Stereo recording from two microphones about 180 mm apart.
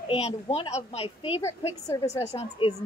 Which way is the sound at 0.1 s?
35° left (ahead or behind).